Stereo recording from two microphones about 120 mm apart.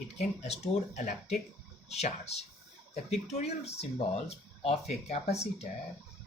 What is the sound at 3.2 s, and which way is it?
Speech, 65° left (ahead or behind).